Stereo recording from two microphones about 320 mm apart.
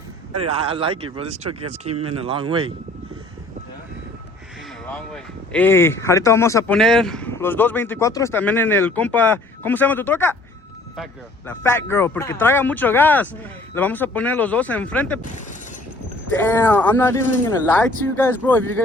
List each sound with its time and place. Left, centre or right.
0.5 s speech: centre
4.9 s speech: centre
16.4 s speech: centre